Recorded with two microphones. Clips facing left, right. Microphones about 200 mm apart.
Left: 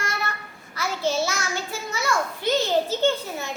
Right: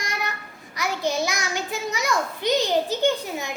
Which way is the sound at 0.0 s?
15° right (ahead or behind).